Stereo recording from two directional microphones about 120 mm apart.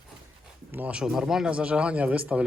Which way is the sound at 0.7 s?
10° right (ahead or behind).